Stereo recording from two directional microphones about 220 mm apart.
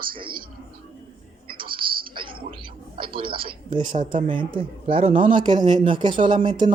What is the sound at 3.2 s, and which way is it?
A man's voice, 25° right (ahead or behind).